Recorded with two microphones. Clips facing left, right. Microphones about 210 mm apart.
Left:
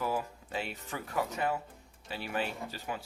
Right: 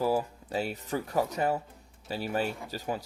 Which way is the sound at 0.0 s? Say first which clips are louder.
Right 6 dB; 35° right (ahead or behind).